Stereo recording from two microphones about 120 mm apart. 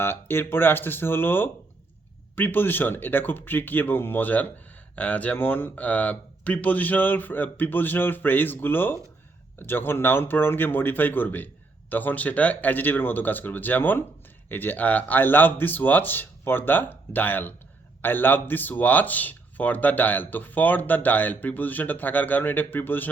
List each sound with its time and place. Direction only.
0.0 s speech: 20° left (ahead or behind)